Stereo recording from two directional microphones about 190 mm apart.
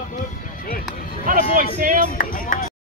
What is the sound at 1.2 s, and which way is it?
Music, 45° right (ahead or behind).